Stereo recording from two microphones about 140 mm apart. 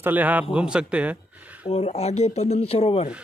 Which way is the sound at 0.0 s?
10° right (ahead or behind).